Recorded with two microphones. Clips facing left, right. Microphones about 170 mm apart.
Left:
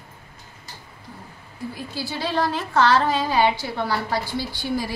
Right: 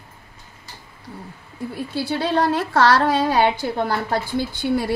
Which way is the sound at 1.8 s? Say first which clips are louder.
Right 8 dB; 60° right (ahead or behind).